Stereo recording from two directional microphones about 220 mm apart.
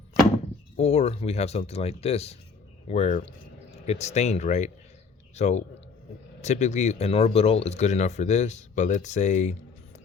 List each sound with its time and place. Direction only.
0.8 s speech: 30° left (ahead or behind)